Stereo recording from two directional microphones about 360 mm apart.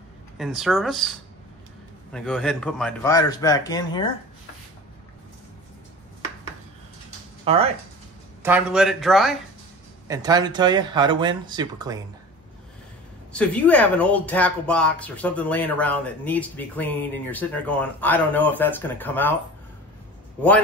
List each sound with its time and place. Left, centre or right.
0.4 s speech: centre
2.1 s speech: centre
7.4 s speech: centre
8.4 s speech: centre
13.3 s speech: centre